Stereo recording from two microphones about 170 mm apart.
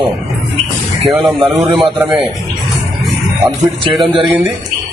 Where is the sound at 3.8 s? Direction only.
30° right (ahead or behind).